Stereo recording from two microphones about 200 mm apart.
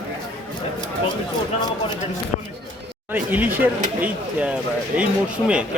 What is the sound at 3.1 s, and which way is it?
A man's voice, 10° right (ahead or behind).